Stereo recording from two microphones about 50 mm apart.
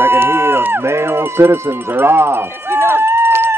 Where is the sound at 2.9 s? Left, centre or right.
Right.